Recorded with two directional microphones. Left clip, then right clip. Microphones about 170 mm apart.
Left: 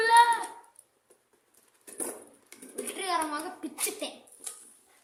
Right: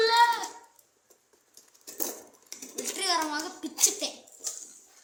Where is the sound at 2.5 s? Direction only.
Centre (ahead or behind).